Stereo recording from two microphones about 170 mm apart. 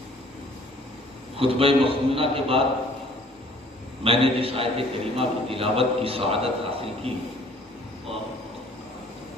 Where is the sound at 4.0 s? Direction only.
35° right (ahead or behind).